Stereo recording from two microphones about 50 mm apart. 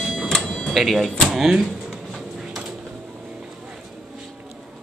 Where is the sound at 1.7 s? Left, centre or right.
Centre.